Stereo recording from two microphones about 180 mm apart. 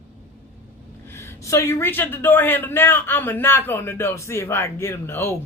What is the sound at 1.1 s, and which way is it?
A man's voice, 15° left (ahead or behind).